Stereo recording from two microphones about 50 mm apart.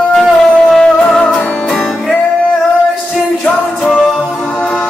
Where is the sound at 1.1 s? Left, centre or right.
Centre.